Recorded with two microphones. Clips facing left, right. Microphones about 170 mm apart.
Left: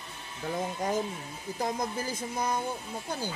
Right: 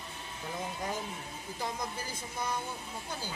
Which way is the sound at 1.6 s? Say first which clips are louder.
Left 6 dB; 45° left (ahead or behind).